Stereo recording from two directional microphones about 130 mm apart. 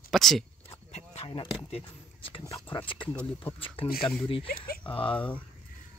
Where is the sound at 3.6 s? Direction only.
45° left (ahead or behind).